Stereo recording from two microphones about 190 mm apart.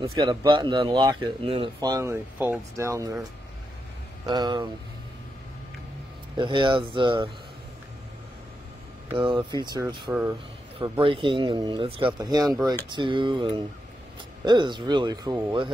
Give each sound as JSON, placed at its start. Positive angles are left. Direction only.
{"t": 0.2, "sound": "speech", "side_deg": -25}
{"t": 4.3, "sound": "speech", "side_deg": -20}
{"t": 6.3, "sound": "speech", "side_deg": -25}
{"t": 9.1, "sound": "speech", "side_deg": -25}